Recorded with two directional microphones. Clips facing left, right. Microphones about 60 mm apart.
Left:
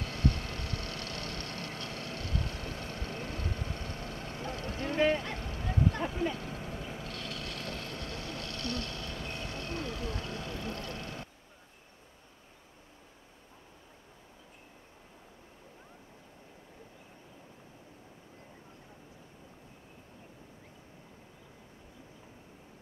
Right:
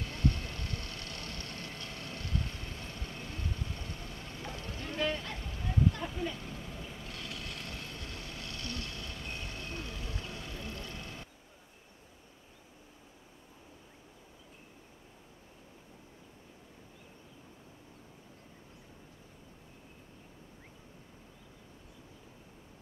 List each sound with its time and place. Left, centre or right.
0.0 s vehicle: centre
3.4 s vehicle: left
4.2 s vehicle: centre
4.9 s a sound: left
5.3 s vehicle: centre
10.8 s a sound: centre